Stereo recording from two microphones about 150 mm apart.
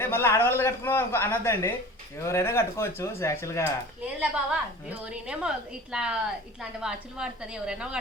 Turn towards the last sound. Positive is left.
turn(degrees=-5)  # may be behind; listen again after turning